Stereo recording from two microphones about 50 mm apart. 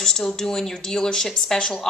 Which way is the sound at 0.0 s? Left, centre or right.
Centre.